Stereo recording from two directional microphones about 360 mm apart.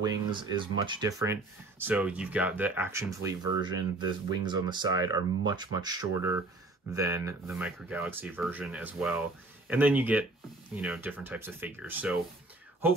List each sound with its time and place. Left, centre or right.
0.0 s speech: centre